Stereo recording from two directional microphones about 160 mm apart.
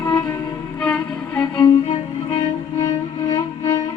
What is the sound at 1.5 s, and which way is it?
Music, 25° left (ahead or behind).